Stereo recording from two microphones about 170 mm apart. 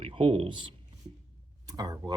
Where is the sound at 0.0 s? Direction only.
30° right (ahead or behind).